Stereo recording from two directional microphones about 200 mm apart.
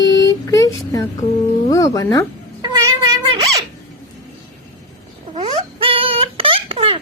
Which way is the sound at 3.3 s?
25° right (ahead or behind).